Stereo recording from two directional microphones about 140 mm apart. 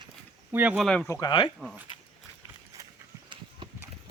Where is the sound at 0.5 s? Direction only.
10° right (ahead or behind).